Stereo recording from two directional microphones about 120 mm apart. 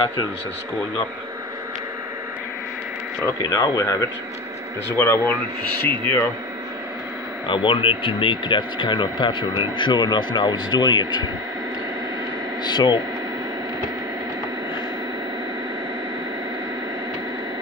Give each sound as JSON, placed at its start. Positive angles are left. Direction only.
{"t": 3.4, "sound": "speech", "side_deg": 30}
{"t": 7.4, "sound": "speech", "side_deg": 45}
{"t": 12.6, "sound": "speech", "side_deg": 35}